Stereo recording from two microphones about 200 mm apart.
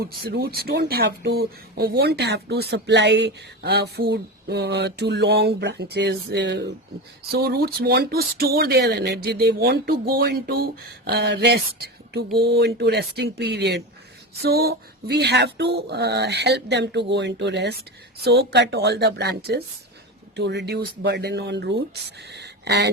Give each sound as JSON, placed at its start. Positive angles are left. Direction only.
{"t": 0.0, "sound": "speech", "side_deg": -50}